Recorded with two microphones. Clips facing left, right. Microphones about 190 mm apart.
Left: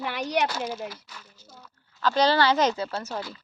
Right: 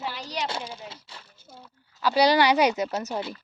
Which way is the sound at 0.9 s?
30° right (ahead or behind).